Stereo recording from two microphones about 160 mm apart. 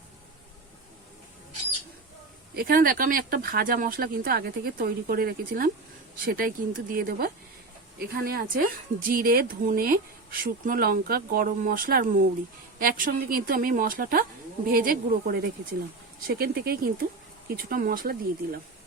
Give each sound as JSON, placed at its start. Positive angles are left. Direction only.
{"t": 2.6, "sound": "speech", "side_deg": -65}